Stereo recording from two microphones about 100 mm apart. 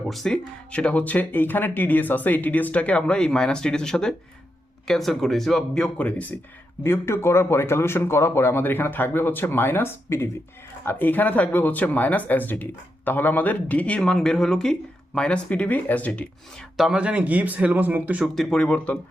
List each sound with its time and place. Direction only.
0.0 s speech: 5° left (ahead or behind)
6.8 s speech: 25° left (ahead or behind)
16.7 s speech: 5° right (ahead or behind)
18.3 s speech: 10° left (ahead or behind)